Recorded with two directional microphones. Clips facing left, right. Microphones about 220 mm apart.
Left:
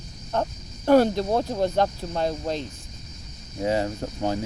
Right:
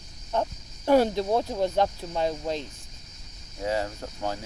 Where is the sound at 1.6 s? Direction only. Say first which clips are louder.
Left 2 dB; 5° right (ahead or behind).